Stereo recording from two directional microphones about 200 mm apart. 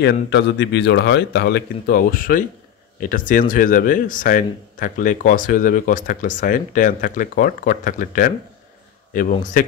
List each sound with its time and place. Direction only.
0.0 s speech: 60° left (ahead or behind); by 9.7 s 40° left (ahead or behind)